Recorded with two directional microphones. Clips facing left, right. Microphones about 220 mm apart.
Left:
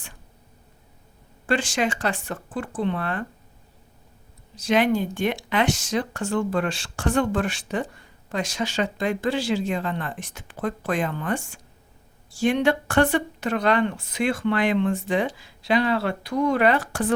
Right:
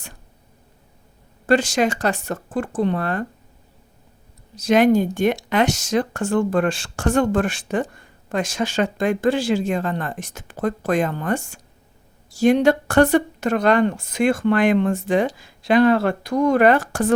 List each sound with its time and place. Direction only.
1.5 s speech: 40° right (ahead or behind)
4.5 s speech: 45° right (ahead or behind)